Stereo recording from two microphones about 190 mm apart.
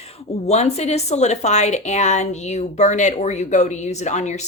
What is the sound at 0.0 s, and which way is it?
A woman's voice, 35° left (ahead or behind).